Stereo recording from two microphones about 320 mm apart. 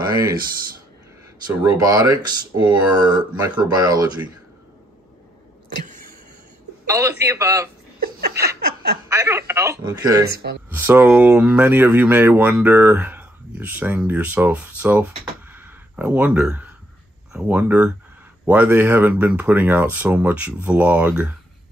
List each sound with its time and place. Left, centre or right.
1.6 s speech: centre
6.9 s speech: centre
8.0 s laughter: right
9.1 s speech: centre